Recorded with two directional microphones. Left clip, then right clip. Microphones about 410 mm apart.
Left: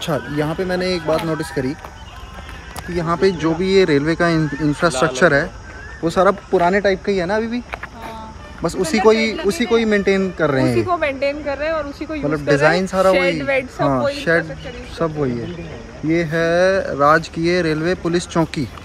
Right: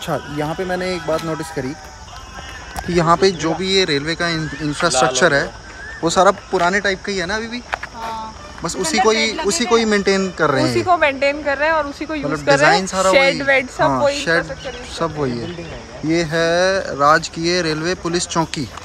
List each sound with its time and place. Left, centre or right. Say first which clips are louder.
0.0 s speech: left 1 dB; centre
2.9 s speech: right 6 dB; centre
3.2 s speech: even; centre
8.6 s speech: left 1 dB; centre
10.8 s speech: right 3 dB; centre
12.3 s speech: right 2 dB; centre
13.1 s speech: right 3 dB; right
14.1 s speech: even; centre